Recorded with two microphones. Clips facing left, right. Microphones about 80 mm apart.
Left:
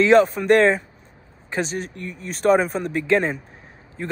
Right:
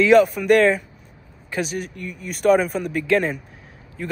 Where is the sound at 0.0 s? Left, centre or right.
Left.